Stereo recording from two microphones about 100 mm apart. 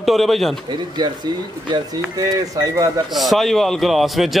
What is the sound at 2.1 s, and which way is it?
Speech, 35° right (ahead or behind).